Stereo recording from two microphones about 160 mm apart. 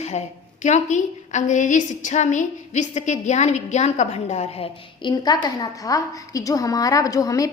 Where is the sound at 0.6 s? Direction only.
50° left (ahead or behind).